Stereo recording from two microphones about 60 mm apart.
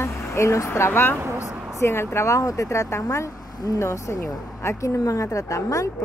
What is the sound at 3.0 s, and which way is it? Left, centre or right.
Speech, left.